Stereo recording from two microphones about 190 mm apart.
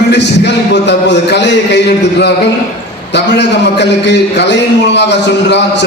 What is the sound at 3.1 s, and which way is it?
A man's voice, 65° left (ahead or behind).